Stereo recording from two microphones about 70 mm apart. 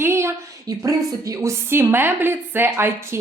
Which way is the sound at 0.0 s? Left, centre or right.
Right.